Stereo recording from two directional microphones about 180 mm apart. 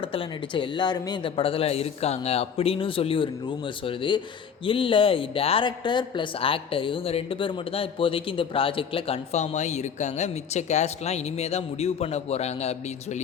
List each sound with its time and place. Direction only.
0.0 s speech: 30° left (ahead or behind)